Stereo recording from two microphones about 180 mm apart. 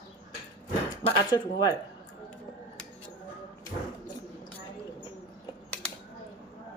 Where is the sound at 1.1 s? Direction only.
25° left (ahead or behind).